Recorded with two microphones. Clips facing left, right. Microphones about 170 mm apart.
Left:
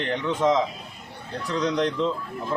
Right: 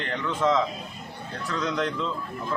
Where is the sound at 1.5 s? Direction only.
35° left (ahead or behind).